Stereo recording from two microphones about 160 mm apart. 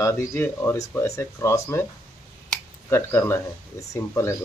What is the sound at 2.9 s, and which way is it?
Speech, 15° left (ahead or behind).